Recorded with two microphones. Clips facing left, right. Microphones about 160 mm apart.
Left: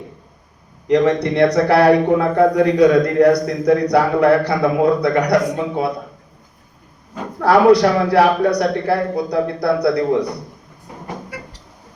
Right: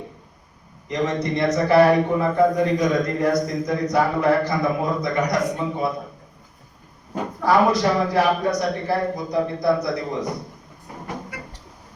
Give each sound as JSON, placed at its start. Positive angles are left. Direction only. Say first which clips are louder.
{"t": 0.9, "sound": "a man's voice", "louder": "left 8 dB", "side_deg": 75}
{"t": 7.4, "sound": "a man's voice", "louder": "left 7 dB", "side_deg": 70}